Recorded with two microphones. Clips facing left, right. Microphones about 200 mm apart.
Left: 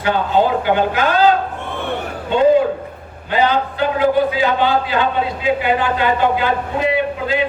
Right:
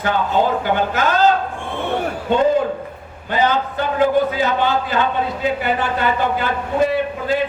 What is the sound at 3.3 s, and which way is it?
Speech, 45° right (ahead or behind).